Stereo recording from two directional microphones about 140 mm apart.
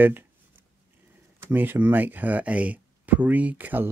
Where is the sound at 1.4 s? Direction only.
15° right (ahead or behind).